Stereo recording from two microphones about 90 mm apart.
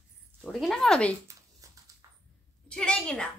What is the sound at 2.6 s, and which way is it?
Speech, 10° left (ahead or behind).